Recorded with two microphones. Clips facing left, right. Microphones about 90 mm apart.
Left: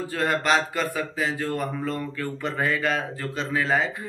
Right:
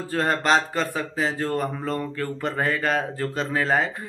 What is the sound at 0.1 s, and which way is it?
Speech, 35° right (ahead or behind).